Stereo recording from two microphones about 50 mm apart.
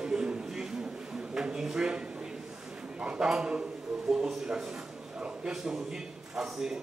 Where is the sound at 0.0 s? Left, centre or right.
Centre.